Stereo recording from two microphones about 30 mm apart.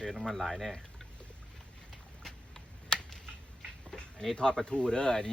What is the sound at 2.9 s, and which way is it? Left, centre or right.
Computer keyboard, left.